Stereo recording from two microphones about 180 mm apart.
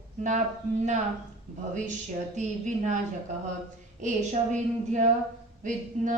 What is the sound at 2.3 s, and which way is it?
Speech, 40° right (ahead or behind).